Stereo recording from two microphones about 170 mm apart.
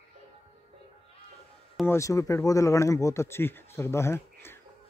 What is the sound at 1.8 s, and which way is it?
Speech, 20° left (ahead or behind).